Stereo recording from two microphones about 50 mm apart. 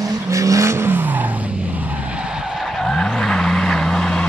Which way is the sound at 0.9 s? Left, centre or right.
Right.